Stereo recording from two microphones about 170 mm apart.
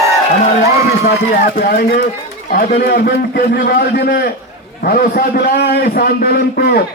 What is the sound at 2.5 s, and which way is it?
A man's voice, 60° left (ahead or behind).